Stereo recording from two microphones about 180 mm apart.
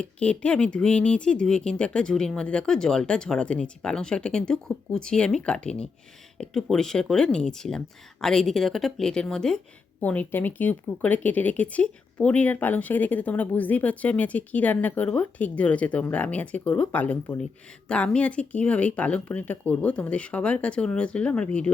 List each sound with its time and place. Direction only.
0.0 s speech: 5° left (ahead or behind)